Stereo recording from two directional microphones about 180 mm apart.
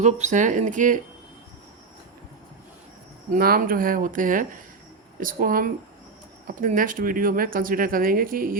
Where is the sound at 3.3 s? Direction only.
55° right (ahead or behind).